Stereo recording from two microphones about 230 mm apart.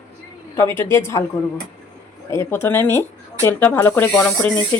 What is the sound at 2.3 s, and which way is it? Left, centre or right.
Speech, centre.